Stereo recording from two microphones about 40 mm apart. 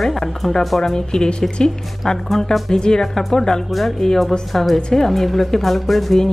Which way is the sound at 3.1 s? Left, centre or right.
Centre.